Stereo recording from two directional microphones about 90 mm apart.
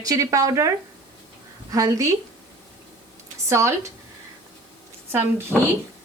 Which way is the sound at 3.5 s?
30° right (ahead or behind).